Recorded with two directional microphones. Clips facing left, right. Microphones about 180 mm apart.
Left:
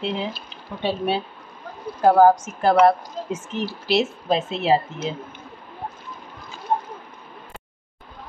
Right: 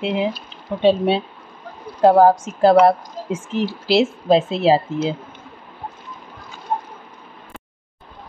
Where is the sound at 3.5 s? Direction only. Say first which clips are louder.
Right 6 dB; 90° right.